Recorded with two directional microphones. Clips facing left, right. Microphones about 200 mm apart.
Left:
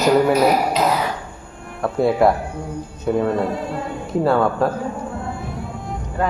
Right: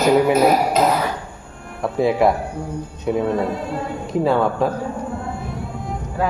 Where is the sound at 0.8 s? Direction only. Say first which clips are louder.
Right 2 dB; 45° right (ahead or behind).